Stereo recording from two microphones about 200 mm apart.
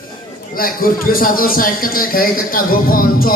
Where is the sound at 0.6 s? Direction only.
45° left (ahead or behind).